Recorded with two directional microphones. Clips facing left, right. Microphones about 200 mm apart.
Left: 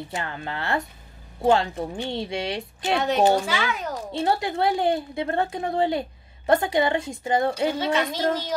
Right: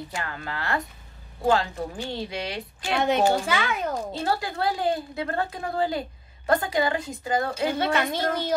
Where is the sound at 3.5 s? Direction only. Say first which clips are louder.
Right 1 dB; 55° right (ahead or behind).